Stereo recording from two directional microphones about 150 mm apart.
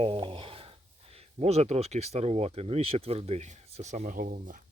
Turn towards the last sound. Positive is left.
turn(degrees=-60)  # may be behind; listen again after turning